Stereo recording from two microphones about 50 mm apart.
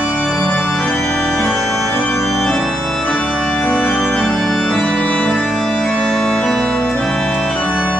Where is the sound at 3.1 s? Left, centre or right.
Left.